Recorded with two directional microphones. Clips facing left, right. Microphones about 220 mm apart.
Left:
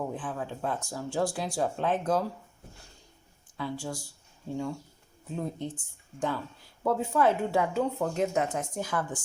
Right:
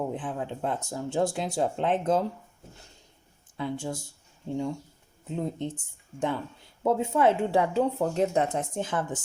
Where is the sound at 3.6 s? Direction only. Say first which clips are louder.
Right 3 dB; 20° right (ahead or behind).